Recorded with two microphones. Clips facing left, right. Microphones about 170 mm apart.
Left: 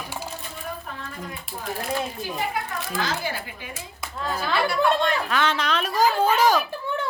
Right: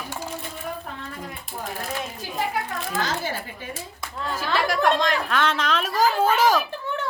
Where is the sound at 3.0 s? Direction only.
45° right (ahead or behind).